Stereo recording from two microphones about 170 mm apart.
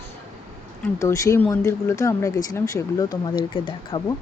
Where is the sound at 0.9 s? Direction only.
20° left (ahead or behind).